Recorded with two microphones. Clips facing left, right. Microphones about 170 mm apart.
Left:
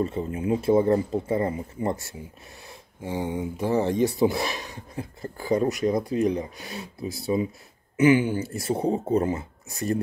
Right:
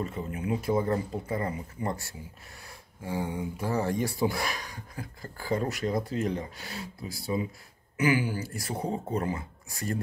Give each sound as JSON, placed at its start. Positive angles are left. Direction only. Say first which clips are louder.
{"t": 0.0, "sound": "speech", "louder": "left 6 dB", "side_deg": 25}